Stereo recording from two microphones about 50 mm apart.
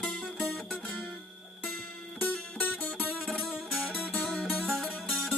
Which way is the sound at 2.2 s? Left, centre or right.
Left.